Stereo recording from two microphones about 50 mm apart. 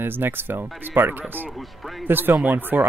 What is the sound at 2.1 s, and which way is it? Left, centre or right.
Speech, right.